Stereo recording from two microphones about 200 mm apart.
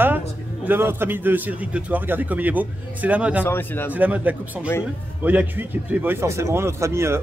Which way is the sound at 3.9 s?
10° right (ahead or behind).